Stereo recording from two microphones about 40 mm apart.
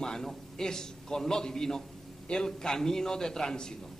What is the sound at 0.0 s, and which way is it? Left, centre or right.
A man's voice, centre.